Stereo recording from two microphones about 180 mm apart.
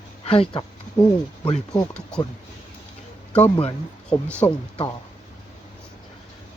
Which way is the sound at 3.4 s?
30° left (ahead or behind).